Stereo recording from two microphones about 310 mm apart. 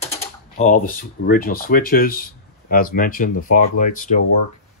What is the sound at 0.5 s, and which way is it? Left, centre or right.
Speech, left.